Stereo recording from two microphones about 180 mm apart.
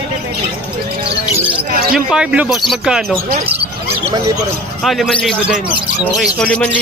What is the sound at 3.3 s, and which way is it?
Speech, 35° right (ahead or behind).